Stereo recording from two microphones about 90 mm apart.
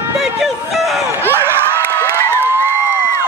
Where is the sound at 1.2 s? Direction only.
25° right (ahead or behind).